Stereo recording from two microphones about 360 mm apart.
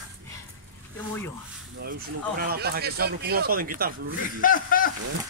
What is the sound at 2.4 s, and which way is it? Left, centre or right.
Speech, right.